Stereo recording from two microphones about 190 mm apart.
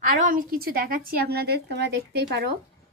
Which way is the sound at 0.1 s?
45° right (ahead or behind).